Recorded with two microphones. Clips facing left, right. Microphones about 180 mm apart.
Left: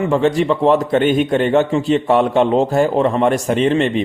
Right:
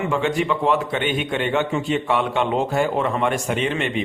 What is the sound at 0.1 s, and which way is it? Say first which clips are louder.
A man's voice: left 7 dB; 35° left (ahead or behind).